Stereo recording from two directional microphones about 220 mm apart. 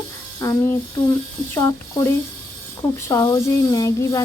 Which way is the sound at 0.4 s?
15° left (ahead or behind).